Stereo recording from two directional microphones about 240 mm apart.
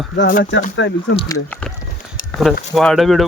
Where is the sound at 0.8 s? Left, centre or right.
Left.